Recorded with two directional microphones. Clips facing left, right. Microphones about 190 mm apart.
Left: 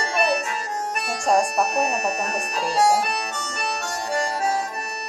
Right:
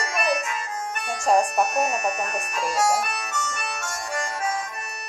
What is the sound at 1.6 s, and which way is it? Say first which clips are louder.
Harmonica: left 1 dB; 35° left (ahead or behind).